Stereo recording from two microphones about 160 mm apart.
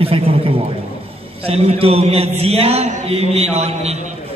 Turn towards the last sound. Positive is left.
turn(degrees=-40)  # may be behind; listen again after turning